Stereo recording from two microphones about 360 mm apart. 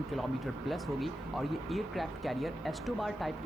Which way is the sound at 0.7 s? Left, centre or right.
Centre.